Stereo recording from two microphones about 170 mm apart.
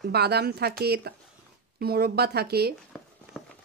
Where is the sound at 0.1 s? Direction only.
70° right (ahead or behind).